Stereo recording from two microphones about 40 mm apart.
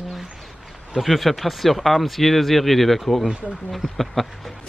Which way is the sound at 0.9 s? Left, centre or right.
Centre.